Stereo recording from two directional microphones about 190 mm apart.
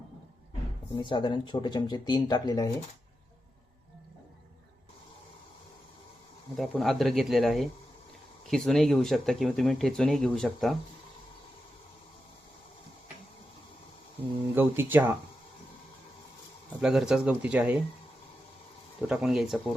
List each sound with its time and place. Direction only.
1.0 s speech: 25° left (ahead or behind)
6.6 s speech: centre (ahead or behind)
14.5 s speech: 10° right (ahead or behind)
16.8 s speech: 5° right (ahead or behind)
19.0 s speech: centre (ahead or behind)